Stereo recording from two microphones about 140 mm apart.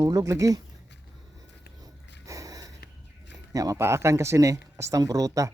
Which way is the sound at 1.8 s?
25° right (ahead or behind).